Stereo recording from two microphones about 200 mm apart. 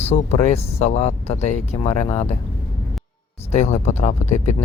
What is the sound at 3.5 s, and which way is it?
Speech, 35° left (ahead or behind).